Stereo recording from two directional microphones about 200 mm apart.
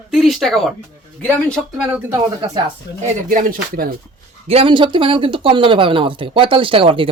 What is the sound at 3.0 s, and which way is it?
Speech, 45° right (ahead or behind).